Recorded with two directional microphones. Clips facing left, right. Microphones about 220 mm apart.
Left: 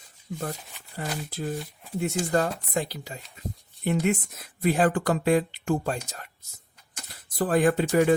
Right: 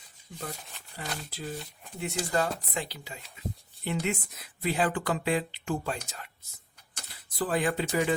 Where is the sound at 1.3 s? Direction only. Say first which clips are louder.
Left 6 dB; 50° left (ahead or behind).